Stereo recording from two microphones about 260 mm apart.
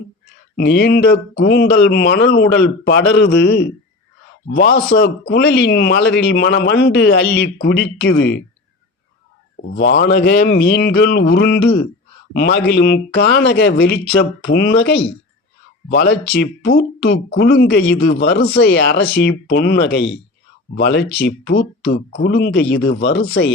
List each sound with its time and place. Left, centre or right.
0.5 s a man's voice: left
9.7 s a man's voice: left
15.9 s a man's voice: left